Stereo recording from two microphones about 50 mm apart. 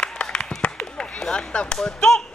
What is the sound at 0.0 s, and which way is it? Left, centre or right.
Clapping, centre.